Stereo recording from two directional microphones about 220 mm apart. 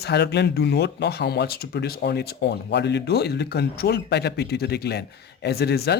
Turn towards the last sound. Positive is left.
turn(degrees=45)  # may be behind; listen again after turning